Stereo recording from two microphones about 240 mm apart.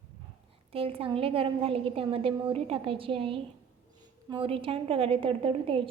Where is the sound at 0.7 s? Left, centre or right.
Right.